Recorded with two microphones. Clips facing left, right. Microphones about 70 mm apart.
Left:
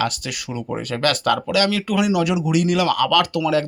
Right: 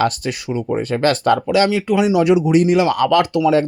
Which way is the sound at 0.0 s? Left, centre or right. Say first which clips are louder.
Right 5 dB; right.